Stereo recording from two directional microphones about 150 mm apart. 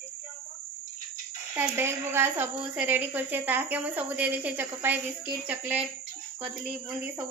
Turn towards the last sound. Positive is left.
turn(degrees=-10)  # may be behind; listen again after turning